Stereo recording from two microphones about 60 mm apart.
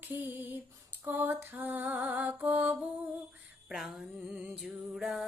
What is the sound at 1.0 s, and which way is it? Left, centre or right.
Music, right.